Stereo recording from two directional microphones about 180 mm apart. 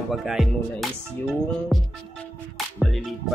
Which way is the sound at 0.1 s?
Centre (ahead or behind).